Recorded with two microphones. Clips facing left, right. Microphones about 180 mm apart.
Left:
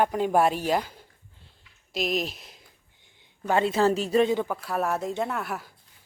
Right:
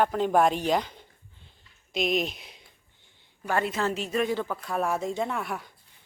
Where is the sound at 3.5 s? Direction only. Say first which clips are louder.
Left 5 dB; 25° left (ahead or behind).